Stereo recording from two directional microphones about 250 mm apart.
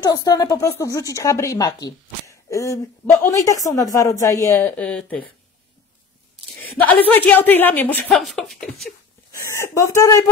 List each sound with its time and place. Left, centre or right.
0.0 s a woman's voice: centre
6.6 s a woman's voice: centre
9.5 s a woman's voice: centre